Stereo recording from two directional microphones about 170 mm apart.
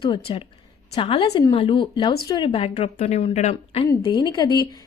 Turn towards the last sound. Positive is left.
turn(degrees=25)  # may be behind; listen again after turning